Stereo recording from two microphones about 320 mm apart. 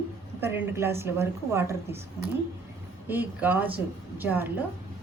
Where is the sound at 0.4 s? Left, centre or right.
Centre.